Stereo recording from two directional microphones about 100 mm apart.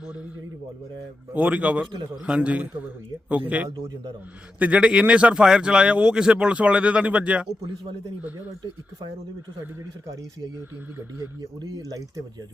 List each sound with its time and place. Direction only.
1.3 s speech: 15° right (ahead or behind)
11.3 s speech: 40° right (ahead or behind)